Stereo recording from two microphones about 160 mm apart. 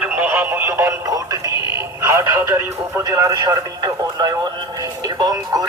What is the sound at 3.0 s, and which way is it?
Speech, 20° right (ahead or behind).